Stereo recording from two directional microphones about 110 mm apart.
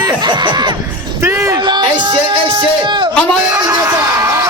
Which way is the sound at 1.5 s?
40° right (ahead or behind).